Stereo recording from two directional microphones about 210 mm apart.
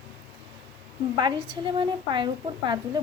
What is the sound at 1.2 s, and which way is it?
A woman's voice, 20° right (ahead or behind).